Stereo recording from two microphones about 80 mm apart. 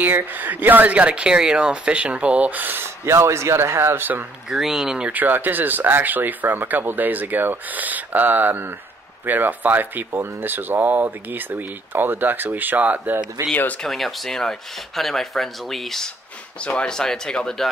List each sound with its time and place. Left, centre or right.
0.0 s speech: right
3.1 s a man's voice: right
4.5 s speech: centre
5.2 s speech: right
13.5 s speech: centre
13.8 s speech: centre